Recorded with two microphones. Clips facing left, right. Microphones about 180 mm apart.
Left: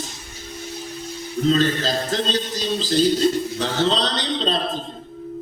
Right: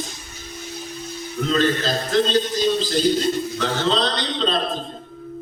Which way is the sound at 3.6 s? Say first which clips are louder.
Left 1 dB; 35° left (ahead or behind).